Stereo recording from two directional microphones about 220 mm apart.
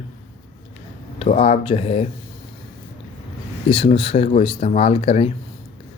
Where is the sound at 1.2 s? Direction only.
30° left (ahead or behind).